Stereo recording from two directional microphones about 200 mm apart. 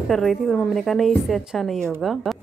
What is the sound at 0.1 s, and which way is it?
Speech, centre (ahead or behind).